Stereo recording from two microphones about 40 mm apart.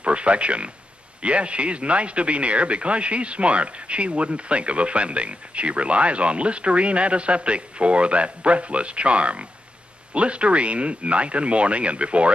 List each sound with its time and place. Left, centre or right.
0.0 s speech: right